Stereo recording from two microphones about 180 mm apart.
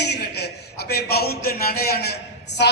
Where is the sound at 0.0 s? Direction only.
65° left (ahead or behind).